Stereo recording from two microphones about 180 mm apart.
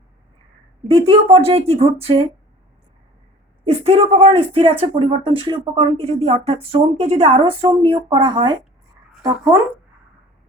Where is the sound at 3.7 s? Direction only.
35° right (ahead or behind).